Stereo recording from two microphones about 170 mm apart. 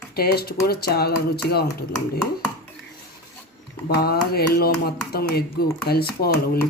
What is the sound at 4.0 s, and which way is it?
Speech, 65° left (ahead or behind).